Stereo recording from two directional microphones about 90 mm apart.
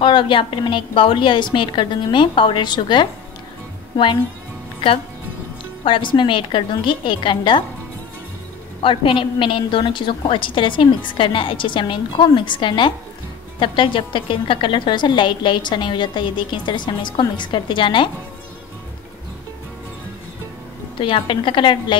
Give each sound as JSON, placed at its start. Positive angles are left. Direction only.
{"t": 0.0, "sound": "a woman's voice", "side_deg": 70}
{"t": 5.9, "sound": "a woman's voice", "side_deg": 65}
{"t": 8.8, "sound": "a woman's voice", "side_deg": 70}
{"t": 21.0, "sound": "a woman's voice", "side_deg": 75}